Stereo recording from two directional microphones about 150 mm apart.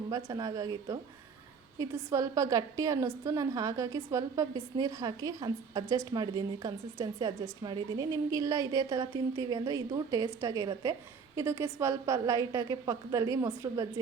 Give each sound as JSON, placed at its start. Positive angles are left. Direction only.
{"t": 0.1, "sound": "a woman's voice", "side_deg": -25}